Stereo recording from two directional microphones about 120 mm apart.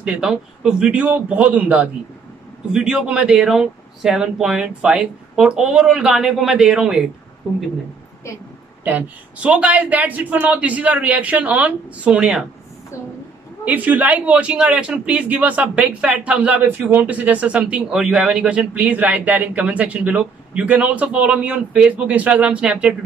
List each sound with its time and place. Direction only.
0.0 s a man's voice: 5° right (ahead or behind)
8.8 s a man's voice: 15° right (ahead or behind)
13.7 s a man's voice: 15° right (ahead or behind)